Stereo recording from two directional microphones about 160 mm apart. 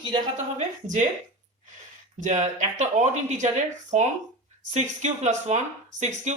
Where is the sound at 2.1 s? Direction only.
50° right (ahead or behind).